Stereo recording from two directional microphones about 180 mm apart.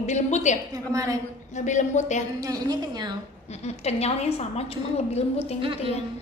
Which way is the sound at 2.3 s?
20° right (ahead or behind).